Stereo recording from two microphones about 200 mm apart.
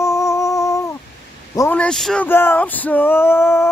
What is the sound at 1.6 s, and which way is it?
Speech, 10° left (ahead or behind).